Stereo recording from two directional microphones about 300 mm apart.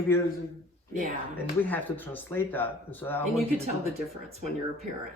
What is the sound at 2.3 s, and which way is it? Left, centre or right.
Speech, centre.